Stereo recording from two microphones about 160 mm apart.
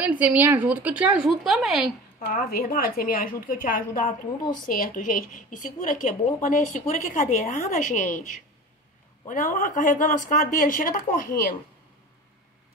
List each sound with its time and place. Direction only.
0.0 s a woman's voice: 10° right (ahead or behind)
2.1 s a woman's voice: 65° left (ahead or behind)